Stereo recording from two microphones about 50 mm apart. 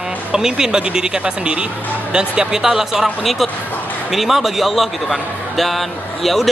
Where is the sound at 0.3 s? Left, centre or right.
Centre.